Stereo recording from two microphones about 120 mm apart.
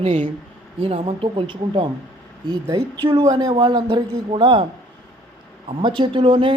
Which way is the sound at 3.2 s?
35° right (ahead or behind).